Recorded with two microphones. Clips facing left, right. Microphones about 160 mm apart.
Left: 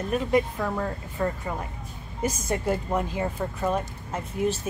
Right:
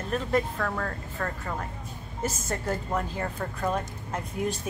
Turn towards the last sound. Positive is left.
turn(degrees=5)  # may be behind; listen again after turning